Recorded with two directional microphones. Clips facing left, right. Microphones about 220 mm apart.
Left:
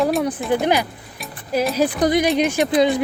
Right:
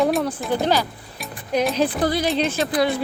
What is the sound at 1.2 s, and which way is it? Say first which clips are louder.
Music: even; 5° left (ahead or behind).